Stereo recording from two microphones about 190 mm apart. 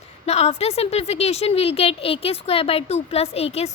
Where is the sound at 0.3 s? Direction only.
35° left (ahead or behind).